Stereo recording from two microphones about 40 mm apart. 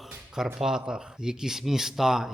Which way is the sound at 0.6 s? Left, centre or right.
Centre.